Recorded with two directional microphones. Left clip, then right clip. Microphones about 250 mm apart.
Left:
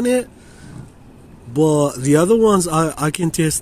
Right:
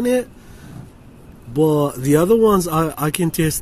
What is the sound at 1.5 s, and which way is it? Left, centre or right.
Speech, centre.